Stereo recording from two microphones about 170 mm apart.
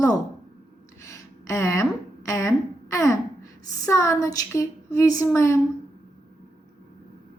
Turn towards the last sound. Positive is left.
turn(degrees=15)  # may be behind; listen again after turning